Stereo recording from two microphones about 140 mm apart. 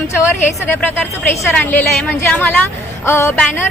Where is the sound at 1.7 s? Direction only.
15° left (ahead or behind).